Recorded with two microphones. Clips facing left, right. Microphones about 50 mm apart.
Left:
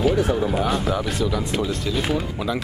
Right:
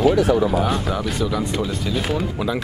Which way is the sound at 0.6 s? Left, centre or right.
Centre.